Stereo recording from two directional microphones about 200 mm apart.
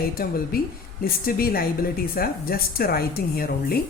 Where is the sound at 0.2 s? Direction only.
45° left (ahead or behind).